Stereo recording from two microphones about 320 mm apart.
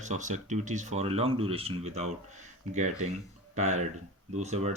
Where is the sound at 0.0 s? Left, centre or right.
Right.